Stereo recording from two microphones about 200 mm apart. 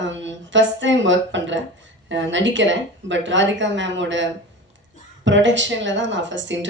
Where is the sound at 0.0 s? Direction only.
65° right (ahead or behind).